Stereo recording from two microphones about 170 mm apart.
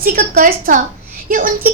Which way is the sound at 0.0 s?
55° right (ahead or behind).